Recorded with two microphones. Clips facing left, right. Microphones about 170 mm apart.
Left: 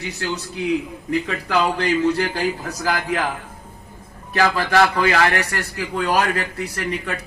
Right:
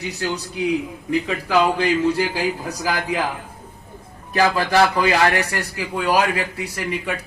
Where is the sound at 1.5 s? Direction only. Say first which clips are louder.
Right 2 dB; 10° right (ahead or behind).